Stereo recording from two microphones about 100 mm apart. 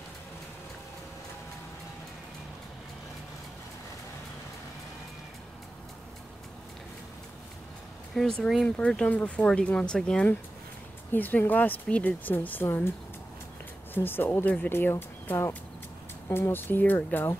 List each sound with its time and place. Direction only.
8.1 s speech: 5° left (ahead or behind); by 12.9 s 20° left (ahead or behind)
13.9 s speech: 20° left (ahead or behind)